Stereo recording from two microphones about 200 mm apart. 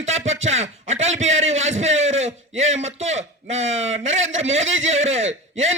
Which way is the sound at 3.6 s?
75° right (ahead or behind).